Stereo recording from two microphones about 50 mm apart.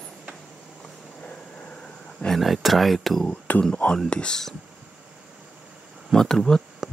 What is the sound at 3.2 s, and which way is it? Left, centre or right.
Speech, left.